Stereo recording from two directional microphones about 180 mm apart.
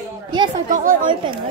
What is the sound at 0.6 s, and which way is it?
Speech, 45° right (ahead or behind).